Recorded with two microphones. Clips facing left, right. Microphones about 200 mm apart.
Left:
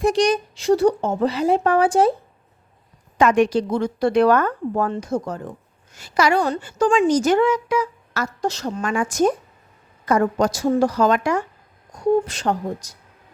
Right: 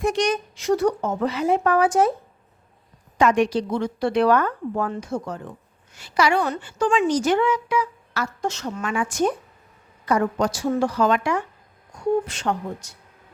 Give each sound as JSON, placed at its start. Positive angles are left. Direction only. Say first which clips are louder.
{"t": 0.0, "sound": "speech", "louder": "left 4 dB", "side_deg": 35}
{"t": 3.2, "sound": "a woman's voice", "louder": "left 2 dB", "side_deg": 50}